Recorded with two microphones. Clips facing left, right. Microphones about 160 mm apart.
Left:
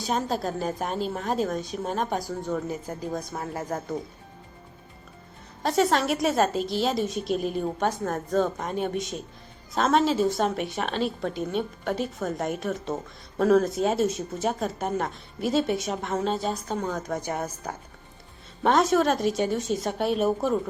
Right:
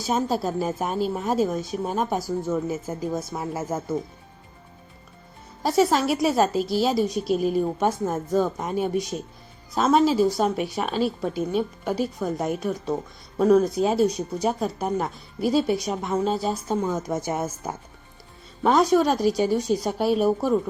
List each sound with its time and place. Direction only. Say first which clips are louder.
0.0 s a woman's voice: right 3 dB; 5° right (ahead or behind)
5.6 s a woman's voice: right 2 dB; centre (ahead or behind)
18.6 s a woman's voice: right 2 dB; centre (ahead or behind)